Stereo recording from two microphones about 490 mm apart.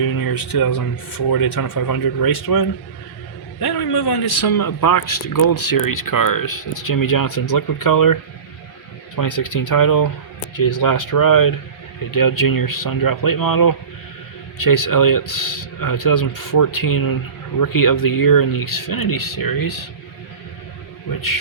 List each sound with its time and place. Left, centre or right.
0.0 s a man's voice: left